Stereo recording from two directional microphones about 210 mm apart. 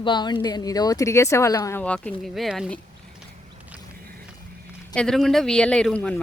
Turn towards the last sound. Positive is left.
turn(degrees=5)  # may be behind; listen again after turning